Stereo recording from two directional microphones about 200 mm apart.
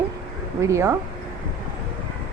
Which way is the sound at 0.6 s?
15° right (ahead or behind).